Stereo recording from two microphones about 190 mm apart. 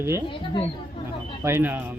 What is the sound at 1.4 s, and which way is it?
Speech, 10° right (ahead or behind).